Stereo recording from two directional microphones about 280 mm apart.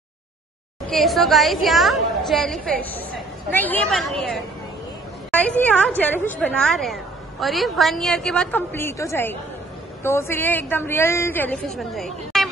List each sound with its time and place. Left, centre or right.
0.8 s a woman's voice: centre